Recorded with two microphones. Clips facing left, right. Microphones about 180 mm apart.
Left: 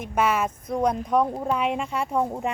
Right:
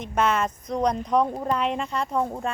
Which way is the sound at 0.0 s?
10° left (ahead or behind).